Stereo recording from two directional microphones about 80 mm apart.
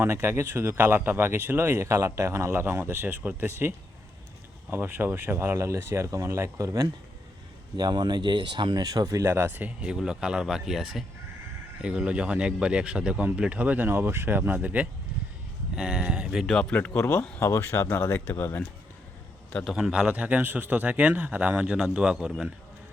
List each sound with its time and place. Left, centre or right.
0.0 s speech: right
7.8 s speech: right
9.3 s speech: right
9.8 s speech: centre
16.5 s speech: centre
16.8 s speech: left
17.2 s speech: centre
17.4 s speech: left
19.6 s speech: centre